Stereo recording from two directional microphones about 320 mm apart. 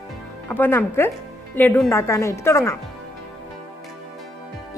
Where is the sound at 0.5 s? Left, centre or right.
Centre.